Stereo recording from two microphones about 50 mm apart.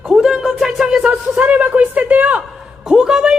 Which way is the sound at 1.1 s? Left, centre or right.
Right.